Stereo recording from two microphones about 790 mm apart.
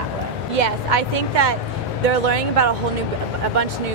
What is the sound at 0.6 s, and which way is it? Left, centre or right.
A woman's voice, right.